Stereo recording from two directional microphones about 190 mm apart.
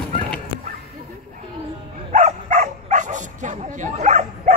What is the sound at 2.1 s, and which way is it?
Bow-wow, 40° right (ahead or behind).